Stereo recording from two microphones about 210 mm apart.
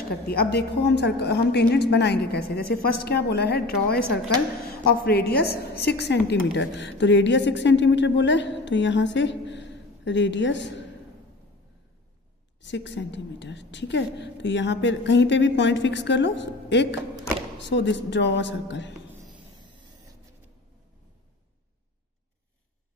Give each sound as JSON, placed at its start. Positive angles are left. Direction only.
{"t": 0.3, "sound": "a woman's voice", "side_deg": 50}
{"t": 12.6, "sound": "a woman's voice", "side_deg": 60}